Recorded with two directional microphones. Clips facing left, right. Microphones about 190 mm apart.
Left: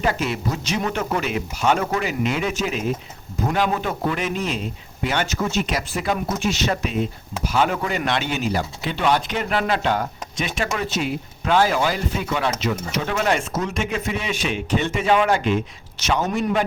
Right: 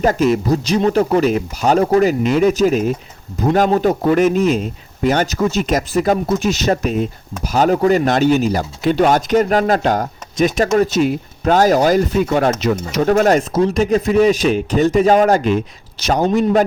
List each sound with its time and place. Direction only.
0.0 s a man's voice: 40° right (ahead or behind)